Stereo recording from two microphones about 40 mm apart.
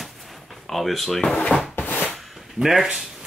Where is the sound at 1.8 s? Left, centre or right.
Left.